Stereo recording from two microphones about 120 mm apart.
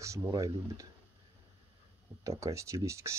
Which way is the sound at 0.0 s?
25° right (ahead or behind).